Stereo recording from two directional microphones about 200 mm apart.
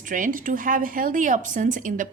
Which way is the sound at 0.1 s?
40° right (ahead or behind).